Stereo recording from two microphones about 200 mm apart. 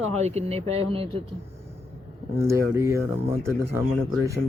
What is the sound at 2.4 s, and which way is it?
Speech, 15° right (ahead or behind).